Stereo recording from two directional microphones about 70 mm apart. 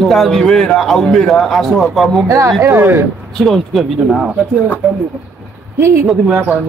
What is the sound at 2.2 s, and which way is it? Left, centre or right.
Speech, right.